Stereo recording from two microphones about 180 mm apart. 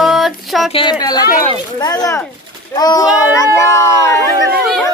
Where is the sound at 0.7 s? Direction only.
25° left (ahead or behind).